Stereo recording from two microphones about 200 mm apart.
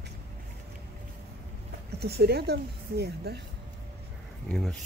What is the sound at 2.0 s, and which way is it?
Speech, 55° right (ahead or behind).